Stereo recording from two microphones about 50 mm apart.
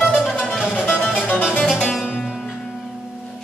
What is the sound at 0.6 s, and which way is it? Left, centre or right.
Music, centre.